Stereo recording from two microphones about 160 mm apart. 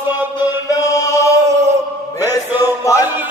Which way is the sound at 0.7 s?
20° left (ahead or behind).